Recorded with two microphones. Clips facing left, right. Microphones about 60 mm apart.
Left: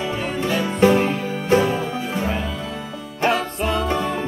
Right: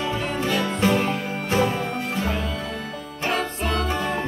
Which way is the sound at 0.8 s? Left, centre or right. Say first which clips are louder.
Left 6 dB; centre.